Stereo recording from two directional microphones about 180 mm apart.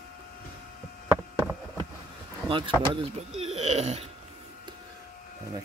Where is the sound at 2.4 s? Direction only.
30° right (ahead or behind).